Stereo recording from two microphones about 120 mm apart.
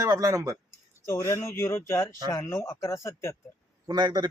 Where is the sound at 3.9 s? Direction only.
35° right (ahead or behind).